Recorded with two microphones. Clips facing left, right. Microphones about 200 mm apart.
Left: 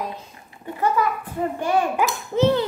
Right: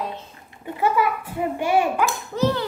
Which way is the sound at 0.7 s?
10° right (ahead or behind).